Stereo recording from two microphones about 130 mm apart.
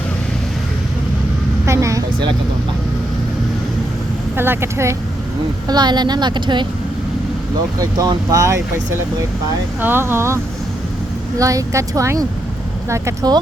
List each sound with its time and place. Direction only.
1.6 s speech: 20° right (ahead or behind)
4.4 s speech: 20° right (ahead or behind)
5.6 s a woman's voice: 35° right (ahead or behind)
7.8 s speech: 30° right (ahead or behind)
9.8 s speech: 15° right (ahead or behind)